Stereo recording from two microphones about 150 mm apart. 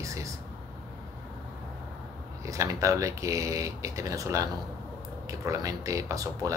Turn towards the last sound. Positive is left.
turn(degrees=-20)  # may be behind; listen again after turning